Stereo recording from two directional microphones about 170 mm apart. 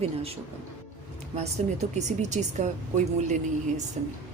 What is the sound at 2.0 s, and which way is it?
A woman's voice, 45° right (ahead or behind).